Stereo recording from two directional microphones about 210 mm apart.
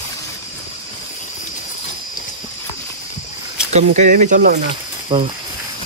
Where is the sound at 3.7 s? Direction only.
35° right (ahead or behind).